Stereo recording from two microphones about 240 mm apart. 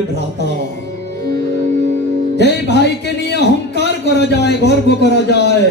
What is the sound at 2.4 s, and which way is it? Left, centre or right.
A man's voice, left.